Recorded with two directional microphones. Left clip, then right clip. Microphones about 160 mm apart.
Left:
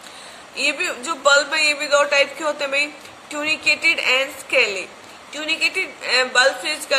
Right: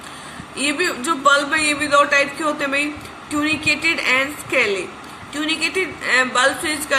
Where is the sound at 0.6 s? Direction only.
30° left (ahead or behind).